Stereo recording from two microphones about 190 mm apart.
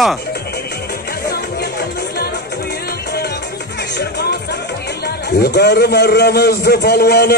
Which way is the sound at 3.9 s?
60° left (ahead or behind).